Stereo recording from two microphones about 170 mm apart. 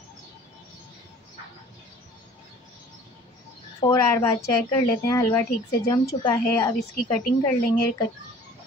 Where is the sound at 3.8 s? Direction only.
20° left (ahead or behind).